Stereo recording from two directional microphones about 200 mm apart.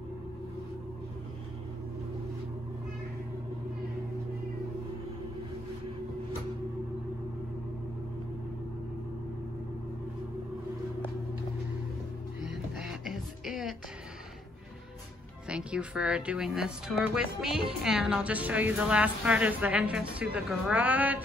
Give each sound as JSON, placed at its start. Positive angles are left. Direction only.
{"t": 12.4, "sound": "music", "side_deg": -5}
{"t": 15.4, "sound": "a woman's voice", "side_deg": -5}